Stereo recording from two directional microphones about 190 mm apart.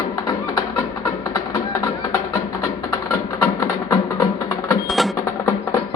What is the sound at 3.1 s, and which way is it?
Mechanisms, 15° left (ahead or behind).